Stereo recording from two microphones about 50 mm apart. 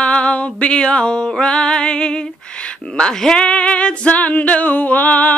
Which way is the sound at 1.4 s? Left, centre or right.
Centre.